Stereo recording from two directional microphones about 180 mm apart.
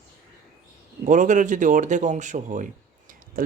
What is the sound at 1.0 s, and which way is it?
Speech, 45° right (ahead or behind).